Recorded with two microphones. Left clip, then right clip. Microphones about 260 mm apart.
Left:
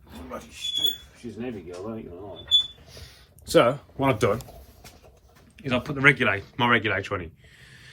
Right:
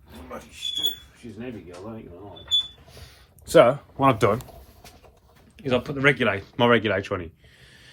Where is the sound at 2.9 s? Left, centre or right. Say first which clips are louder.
Left 1 dB; centre.